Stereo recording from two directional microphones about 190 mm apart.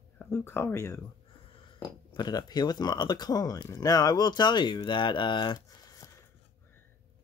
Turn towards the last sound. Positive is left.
turn(degrees=25)  # may be behind; listen again after turning